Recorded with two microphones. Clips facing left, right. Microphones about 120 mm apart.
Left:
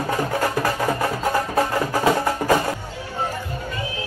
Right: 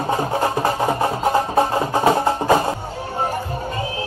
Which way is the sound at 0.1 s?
25° right (ahead or behind).